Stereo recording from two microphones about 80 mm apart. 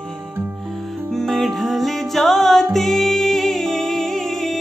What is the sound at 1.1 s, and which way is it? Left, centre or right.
Music, centre.